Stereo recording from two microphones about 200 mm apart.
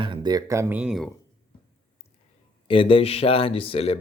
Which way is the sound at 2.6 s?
25° left (ahead or behind).